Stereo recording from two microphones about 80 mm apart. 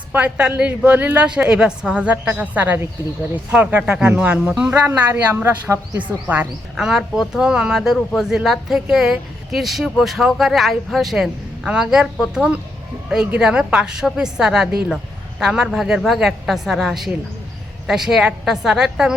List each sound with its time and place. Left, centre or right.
0.1 s a woman's voice: centre
5.3 s speech: right
6.0 s speech: centre
6.7 s a woman's voice: centre